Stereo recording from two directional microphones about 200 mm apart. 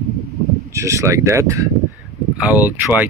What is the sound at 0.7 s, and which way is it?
Speech, 15° right (ahead or behind).